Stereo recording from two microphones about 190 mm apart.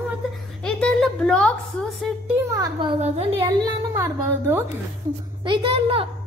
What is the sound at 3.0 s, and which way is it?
Speech, 30° right (ahead or behind).